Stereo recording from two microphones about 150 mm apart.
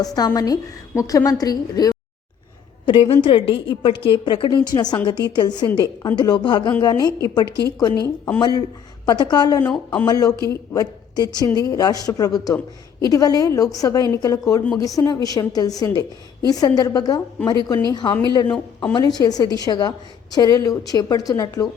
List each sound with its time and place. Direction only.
0.0 s a woman's voice: 25° left (ahead or behind)
2.8 s a woman's voice: 35° left (ahead or behind)
9.7 s speech: 10° left (ahead or behind)
10.1 s a woman's voice: 25° left (ahead or behind)